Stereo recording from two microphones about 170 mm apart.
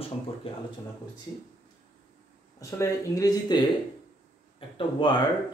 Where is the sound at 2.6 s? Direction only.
20° left (ahead or behind).